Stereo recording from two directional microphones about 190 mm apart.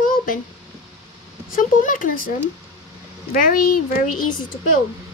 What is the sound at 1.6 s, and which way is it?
Speech, 45° left (ahead or behind).